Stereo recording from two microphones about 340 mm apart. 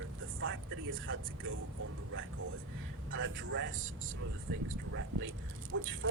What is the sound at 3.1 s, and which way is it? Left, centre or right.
Speech, right.